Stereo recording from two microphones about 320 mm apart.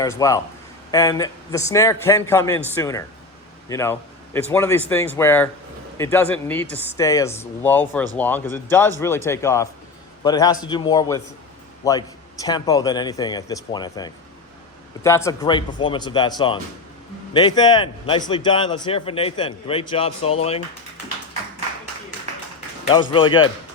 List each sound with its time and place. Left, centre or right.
0.0 s speech: centre
23.1 s speech: centre